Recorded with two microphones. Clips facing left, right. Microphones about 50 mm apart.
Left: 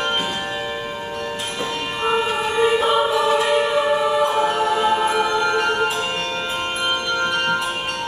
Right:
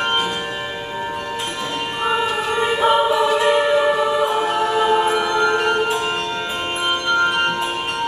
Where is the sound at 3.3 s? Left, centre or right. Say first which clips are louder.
Right 2 dB; centre.